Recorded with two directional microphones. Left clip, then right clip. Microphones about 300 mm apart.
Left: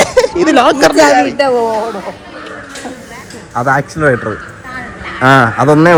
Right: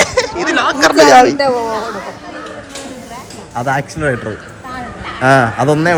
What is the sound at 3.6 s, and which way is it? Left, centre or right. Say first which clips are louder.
Speech: left 5 dB; centre.